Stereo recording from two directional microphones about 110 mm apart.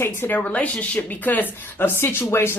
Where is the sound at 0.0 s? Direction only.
20° left (ahead or behind).